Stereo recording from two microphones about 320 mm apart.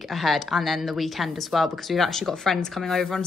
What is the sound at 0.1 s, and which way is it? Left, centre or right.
Speech, centre.